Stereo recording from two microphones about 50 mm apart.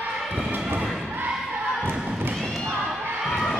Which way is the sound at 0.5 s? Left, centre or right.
Right.